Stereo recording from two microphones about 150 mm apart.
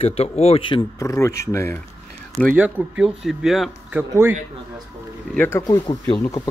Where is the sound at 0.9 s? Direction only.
20° left (ahead or behind).